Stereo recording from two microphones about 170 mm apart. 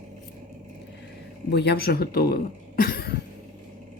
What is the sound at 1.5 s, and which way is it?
Speech, 75° left (ahead or behind).